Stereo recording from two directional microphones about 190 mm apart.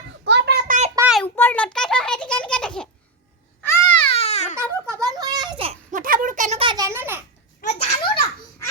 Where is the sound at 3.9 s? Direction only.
30° left (ahead or behind).